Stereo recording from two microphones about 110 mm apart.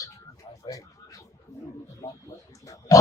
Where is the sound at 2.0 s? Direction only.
25° left (ahead or behind).